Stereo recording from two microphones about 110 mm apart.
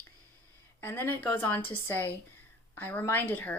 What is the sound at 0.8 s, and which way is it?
A woman's voice, 20° left (ahead or behind).